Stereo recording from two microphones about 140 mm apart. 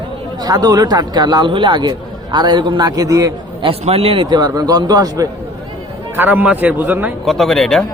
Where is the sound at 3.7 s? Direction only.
45° right (ahead or behind); by 5.3 s 25° right (ahead or behind).